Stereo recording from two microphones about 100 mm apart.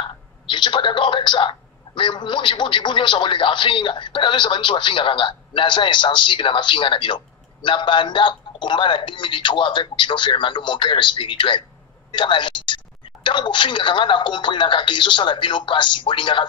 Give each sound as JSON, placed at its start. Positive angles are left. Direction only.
{"t": 0.5, "sound": "a man's voice", "side_deg": 50}